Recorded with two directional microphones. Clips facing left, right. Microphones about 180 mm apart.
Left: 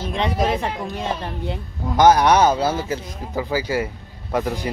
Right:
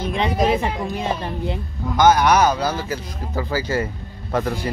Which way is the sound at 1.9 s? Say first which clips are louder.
Left 1 dB; 30° left (ahead or behind).